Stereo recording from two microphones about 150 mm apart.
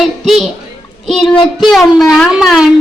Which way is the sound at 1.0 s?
Centre (ahead or behind).